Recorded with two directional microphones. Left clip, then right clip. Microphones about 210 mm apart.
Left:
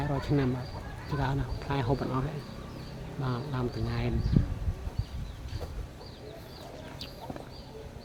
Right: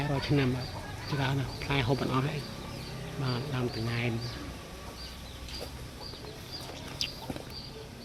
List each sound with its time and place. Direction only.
0.0 s speech: 5° left (ahead or behind)
3.2 s speech: 5° left (ahead or behind)